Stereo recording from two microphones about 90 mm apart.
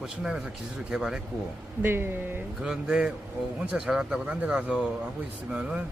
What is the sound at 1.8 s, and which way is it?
Speech, 25° right (ahead or behind).